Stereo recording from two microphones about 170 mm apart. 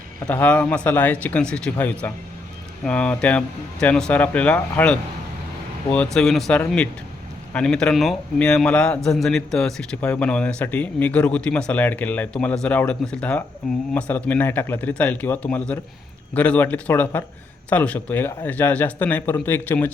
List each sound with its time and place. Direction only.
0.3 s a man's voice: 10° left (ahead or behind)